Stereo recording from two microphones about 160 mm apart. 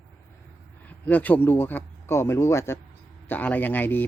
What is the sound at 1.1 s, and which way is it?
Speech, 10° left (ahead or behind).